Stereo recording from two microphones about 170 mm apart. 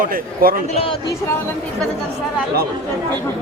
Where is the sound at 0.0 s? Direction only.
55° right (ahead or behind).